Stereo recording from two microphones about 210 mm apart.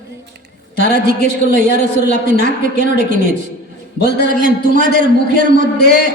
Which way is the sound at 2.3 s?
50° left (ahead or behind).